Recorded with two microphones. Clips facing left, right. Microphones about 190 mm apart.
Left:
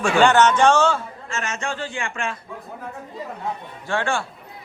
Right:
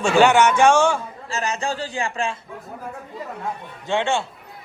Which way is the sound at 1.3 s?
35° right (ahead or behind).